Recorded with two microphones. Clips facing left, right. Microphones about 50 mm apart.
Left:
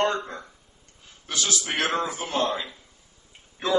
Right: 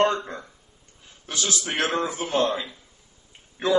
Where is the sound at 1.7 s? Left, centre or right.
Centre.